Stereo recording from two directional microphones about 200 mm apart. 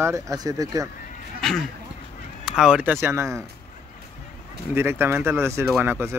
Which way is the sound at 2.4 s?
5° right (ahead or behind).